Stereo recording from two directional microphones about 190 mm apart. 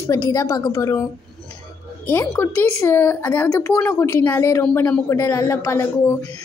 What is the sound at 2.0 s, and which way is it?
A woman's voice, 10° left (ahead or behind).